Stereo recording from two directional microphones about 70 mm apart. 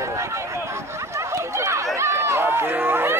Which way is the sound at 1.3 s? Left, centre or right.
Right.